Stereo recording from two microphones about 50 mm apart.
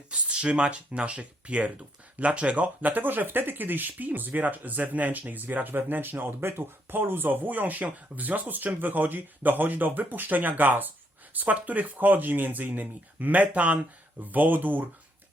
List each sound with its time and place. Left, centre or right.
0.1 s speech: centre; by 14.8 s right